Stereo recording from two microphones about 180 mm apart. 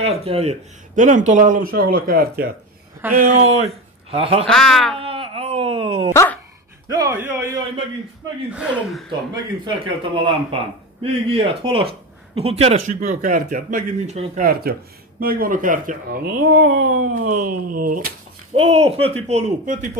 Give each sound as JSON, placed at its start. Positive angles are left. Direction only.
{"t": 0.0, "sound": "speech", "side_deg": -35}
{"t": 3.1, "sound": "speech", "side_deg": -40}
{"t": 4.5, "sound": "speech", "side_deg": 5}
{"t": 5.0, "sound": "wail", "side_deg": -30}
{"t": 6.1, "sound": "speech", "side_deg": 10}
{"t": 6.9, "sound": "speech", "side_deg": -15}
{"t": 9.3, "sound": "a man's voice", "side_deg": -25}
{"t": 12.8, "sound": "speech", "side_deg": -45}
{"t": 14.4, "sound": "speech", "side_deg": -55}
{"t": 18.5, "sound": "speech", "side_deg": -35}